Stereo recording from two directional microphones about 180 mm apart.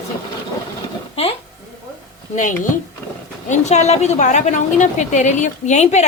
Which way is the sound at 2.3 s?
45° left (ahead or behind).